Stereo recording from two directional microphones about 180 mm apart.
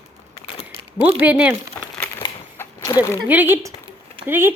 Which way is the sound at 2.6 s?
15° left (ahead or behind).